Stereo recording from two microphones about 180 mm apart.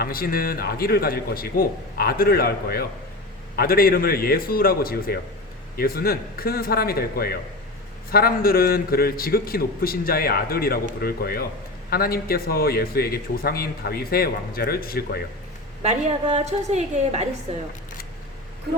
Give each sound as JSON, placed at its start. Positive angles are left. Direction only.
{"t": 0.0, "sound": "a man's voice", "side_deg": 55}
{"t": 15.8, "sound": "a woman's voice", "side_deg": -35}